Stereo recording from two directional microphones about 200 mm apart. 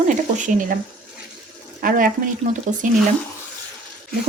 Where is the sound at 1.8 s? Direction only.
45° right (ahead or behind).